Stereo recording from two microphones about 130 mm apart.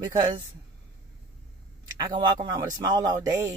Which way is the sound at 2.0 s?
35° right (ahead or behind).